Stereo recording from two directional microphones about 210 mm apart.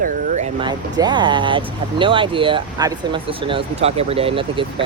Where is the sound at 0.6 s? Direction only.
20° right (ahead or behind).